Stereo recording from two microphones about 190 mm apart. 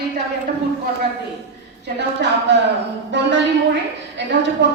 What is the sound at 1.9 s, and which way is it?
A woman's voice, 65° right (ahead or behind).